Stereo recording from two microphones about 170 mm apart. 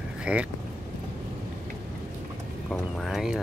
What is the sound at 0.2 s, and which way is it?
Speech, 5° right (ahead or behind).